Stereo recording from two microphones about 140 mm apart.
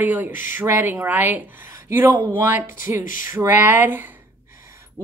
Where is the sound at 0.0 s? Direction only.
10° right (ahead or behind).